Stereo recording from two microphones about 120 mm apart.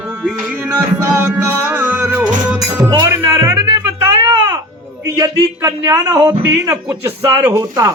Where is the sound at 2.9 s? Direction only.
25° right (ahead or behind).